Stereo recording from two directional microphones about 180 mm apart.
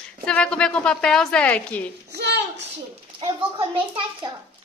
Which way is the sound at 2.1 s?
70° right (ahead or behind).